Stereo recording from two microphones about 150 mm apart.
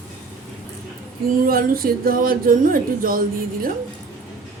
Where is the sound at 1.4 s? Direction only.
80° right.